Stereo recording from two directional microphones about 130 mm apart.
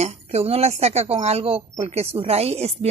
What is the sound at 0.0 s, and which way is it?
Speech, 60° right (ahead or behind).